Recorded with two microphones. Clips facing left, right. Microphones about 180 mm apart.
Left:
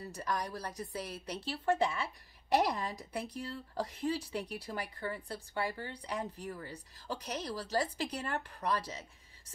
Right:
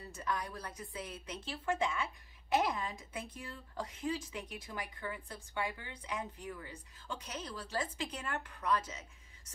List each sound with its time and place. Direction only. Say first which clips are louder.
0.1 s speech: left 1 dB; 40° left (ahead or behind)